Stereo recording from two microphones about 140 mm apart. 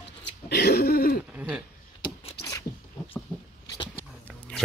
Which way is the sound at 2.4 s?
25° left (ahead or behind).